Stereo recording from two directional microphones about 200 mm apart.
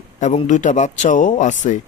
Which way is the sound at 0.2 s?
35° left (ahead or behind).